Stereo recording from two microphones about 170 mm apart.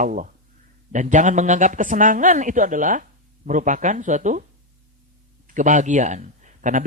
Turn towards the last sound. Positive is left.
turn(degrees=-50)  # may be behind; listen again after turning